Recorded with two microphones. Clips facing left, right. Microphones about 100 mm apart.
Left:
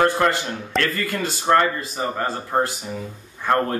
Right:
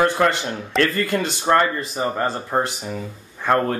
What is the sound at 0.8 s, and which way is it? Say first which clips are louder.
Speech: right 4 dB; 20° right (ahead or behind).